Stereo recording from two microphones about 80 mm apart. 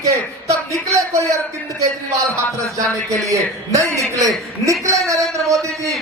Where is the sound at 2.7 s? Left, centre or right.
Right.